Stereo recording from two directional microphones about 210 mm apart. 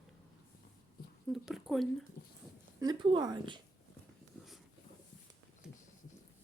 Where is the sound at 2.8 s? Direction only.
20° right (ahead or behind).